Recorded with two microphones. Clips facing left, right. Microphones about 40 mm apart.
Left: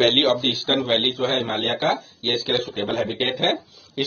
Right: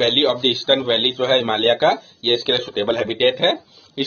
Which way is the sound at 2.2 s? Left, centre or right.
Right.